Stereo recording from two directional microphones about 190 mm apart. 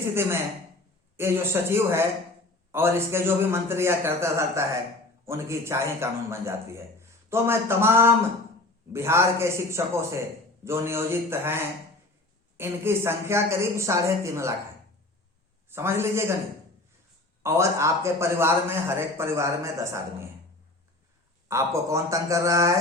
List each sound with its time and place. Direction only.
0.1 s a man's voice: 10° right (ahead or behind)
15.7 s a man's voice: 15° right (ahead or behind)
17.4 s a man's voice: 15° right (ahead or behind)
21.4 s a man's voice: 15° right (ahead or behind)